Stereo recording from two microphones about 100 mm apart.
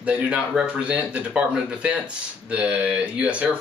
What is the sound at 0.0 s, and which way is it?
Speech, 10° right (ahead or behind).